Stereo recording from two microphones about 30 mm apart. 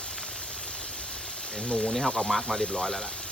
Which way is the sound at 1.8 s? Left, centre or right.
Centre.